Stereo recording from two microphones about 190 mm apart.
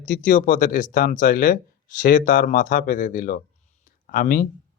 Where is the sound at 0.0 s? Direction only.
45° left (ahead or behind).